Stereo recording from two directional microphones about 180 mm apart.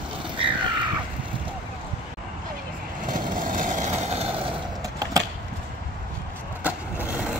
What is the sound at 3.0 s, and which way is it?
Vehicle, 50° right (ahead or behind).